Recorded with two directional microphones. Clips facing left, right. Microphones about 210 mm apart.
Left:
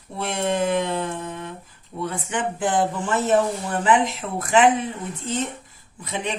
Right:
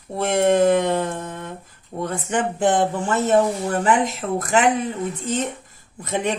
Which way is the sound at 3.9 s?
45° right (ahead or behind).